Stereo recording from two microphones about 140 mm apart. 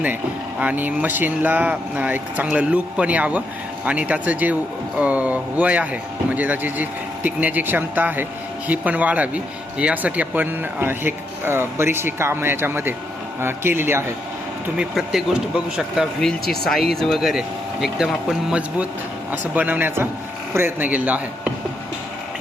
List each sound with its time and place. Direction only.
0.6 s speech: 10° right (ahead or behind)
14.8 s speech: 5° right (ahead or behind)